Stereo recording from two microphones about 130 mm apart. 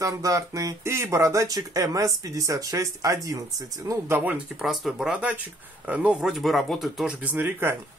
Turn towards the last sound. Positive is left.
turn(degrees=-15)  # may be behind; listen again after turning